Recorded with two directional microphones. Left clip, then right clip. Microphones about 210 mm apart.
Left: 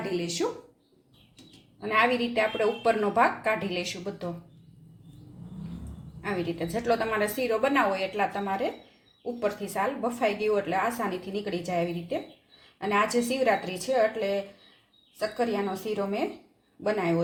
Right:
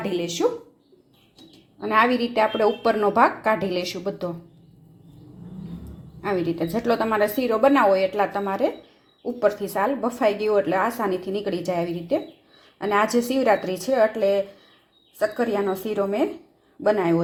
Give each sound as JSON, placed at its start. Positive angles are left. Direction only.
{"t": 1.8, "sound": "a woman's voice", "side_deg": -30}
{"t": 6.2, "sound": "a woman's voice", "side_deg": -30}